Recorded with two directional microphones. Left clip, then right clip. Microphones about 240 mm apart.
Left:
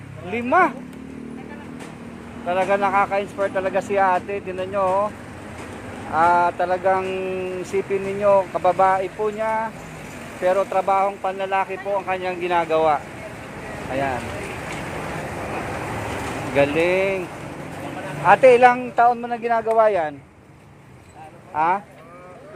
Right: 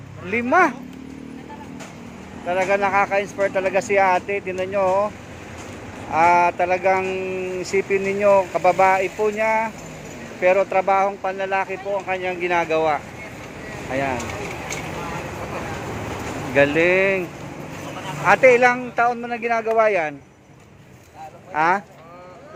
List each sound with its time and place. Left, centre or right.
0.3 s speech: centre
2.5 s speech: centre
6.1 s speech: centre
8.2 s speech: centre
16.6 s speech: centre
18.3 s speech: centre
21.5 s speech: centre